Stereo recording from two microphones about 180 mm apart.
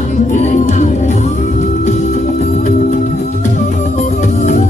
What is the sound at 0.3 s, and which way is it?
Music, 40° left (ahead or behind).